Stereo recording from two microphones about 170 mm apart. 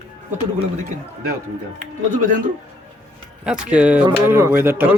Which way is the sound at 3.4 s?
5° right (ahead or behind).